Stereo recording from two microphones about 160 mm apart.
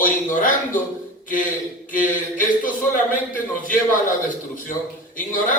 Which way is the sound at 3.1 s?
60° left (ahead or behind).